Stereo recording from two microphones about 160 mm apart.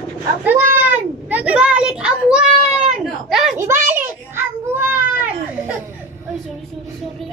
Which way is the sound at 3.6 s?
15° right (ahead or behind).